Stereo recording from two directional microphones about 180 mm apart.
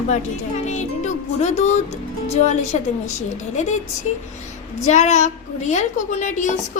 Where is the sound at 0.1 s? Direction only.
40° left (ahead or behind).